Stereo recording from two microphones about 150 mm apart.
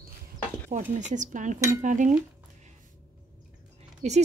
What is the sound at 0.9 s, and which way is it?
Speech, 55° right (ahead or behind).